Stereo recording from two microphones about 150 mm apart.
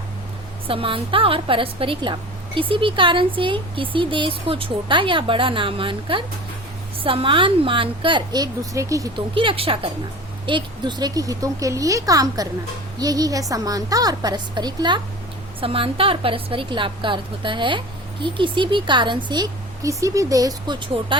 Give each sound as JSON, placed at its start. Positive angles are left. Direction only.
{"t": 0.7, "sound": "a woman's voice", "side_deg": -35}
{"t": 9.3, "sound": "a woman's voice", "side_deg": -35}